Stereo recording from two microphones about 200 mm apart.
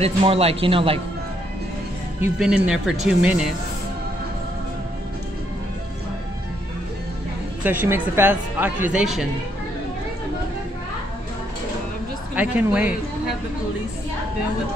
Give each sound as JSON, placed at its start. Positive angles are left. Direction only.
{"t": 0.0, "sound": "a man's voice", "side_deg": -30}
{"t": 2.2, "sound": "speech", "side_deg": -5}
{"t": 7.8, "sound": "a woman's voice", "side_deg": -10}
{"t": 12.4, "sound": "a woman's voice", "side_deg": -5}